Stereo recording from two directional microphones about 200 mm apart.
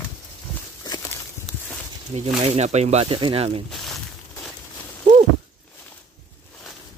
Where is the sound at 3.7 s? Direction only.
Centre (ahead or behind).